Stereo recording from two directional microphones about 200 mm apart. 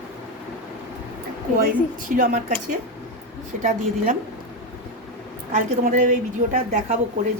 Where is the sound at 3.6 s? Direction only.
35° right (ahead or behind).